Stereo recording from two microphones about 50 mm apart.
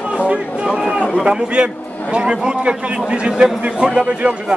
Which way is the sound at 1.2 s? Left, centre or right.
Centre.